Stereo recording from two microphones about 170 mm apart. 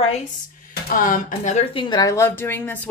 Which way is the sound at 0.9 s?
55° left (ahead or behind).